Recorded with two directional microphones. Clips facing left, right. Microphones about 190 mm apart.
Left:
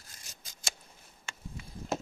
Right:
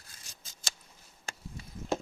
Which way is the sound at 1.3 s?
40° right (ahead or behind).